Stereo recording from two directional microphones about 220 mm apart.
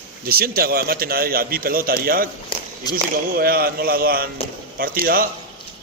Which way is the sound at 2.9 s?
45° right (ahead or behind).